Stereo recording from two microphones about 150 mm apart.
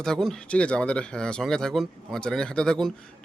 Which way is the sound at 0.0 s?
5° left (ahead or behind).